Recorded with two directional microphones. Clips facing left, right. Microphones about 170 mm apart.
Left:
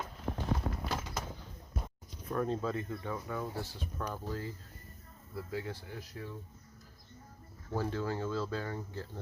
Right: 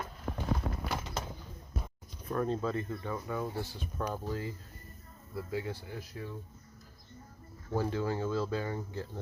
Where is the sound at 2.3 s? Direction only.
Centre (ahead or behind).